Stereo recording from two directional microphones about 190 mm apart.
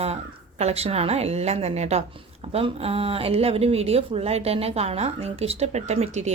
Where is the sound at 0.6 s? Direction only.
35° right (ahead or behind).